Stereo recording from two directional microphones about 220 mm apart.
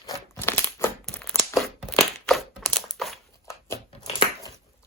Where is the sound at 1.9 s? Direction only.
5° left (ahead or behind).